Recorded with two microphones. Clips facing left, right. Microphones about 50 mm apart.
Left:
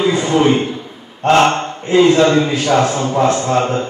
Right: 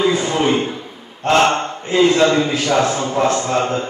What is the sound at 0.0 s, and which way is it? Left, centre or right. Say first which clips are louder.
Speech: left 3 dB; left.